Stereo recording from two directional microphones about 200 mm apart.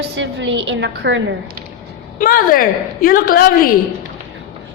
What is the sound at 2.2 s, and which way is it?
A woman's voice, 45° left (ahead or behind).